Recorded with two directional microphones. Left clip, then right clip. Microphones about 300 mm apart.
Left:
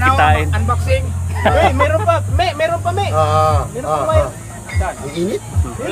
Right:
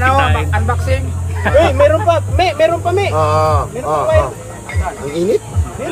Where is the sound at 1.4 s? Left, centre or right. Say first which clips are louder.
Right 2 dB; left.